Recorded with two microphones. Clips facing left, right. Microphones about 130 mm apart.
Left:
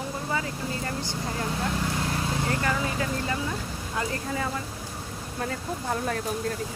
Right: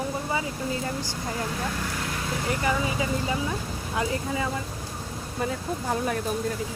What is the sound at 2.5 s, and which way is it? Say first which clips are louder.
Speech: right 5 dB; 15° right (ahead or behind).